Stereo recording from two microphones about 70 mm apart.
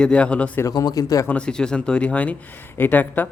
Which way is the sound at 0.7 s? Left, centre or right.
Left.